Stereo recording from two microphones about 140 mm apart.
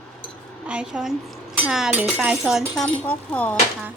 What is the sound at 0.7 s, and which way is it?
A woman's voice, 5° right (ahead or behind).